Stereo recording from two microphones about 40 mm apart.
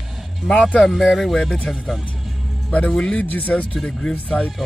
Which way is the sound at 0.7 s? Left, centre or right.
Centre.